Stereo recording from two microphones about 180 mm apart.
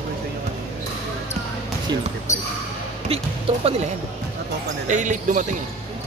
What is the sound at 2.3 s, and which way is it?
Basketball bounce, 40° left (ahead or behind).